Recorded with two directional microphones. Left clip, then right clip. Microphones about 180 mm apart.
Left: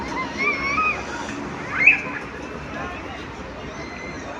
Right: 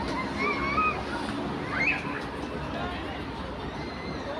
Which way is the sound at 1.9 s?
75° right (ahead or behind).